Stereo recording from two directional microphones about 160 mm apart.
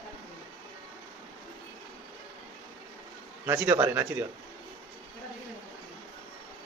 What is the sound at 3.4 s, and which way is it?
Speech, 15° right (ahead or behind).